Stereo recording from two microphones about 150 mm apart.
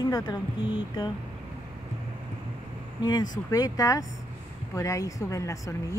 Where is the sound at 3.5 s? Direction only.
25° left (ahead or behind).